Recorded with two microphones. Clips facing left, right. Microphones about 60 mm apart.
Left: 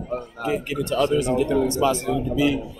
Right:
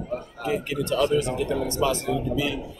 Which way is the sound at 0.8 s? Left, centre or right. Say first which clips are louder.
Left 1 dB; left.